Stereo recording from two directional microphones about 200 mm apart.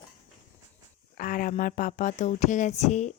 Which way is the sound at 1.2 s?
45° left (ahead or behind).